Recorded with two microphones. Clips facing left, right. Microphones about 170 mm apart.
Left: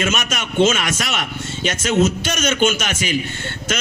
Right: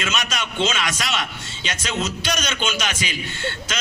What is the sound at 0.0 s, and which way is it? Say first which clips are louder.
A man's voice: left 4 dB; 50° left (ahead or behind).